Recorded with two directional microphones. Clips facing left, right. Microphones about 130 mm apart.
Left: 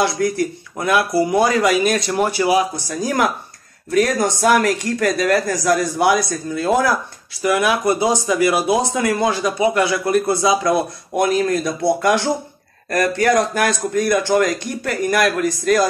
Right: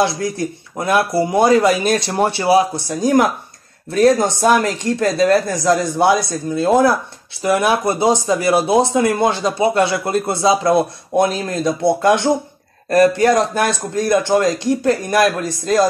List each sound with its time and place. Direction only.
0.0 s speech: 25° right (ahead or behind)